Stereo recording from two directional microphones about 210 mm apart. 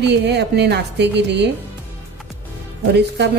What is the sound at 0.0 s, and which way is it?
A woman's voice, 55° right (ahead or behind).